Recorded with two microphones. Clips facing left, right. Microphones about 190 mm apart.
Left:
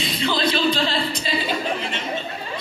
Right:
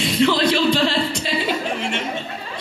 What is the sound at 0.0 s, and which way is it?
Music, 75° right (ahead or behind).